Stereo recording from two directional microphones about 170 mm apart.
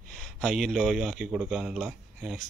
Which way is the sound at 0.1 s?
5° left (ahead or behind).